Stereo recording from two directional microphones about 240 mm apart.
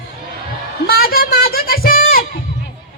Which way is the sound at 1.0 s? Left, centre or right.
Left.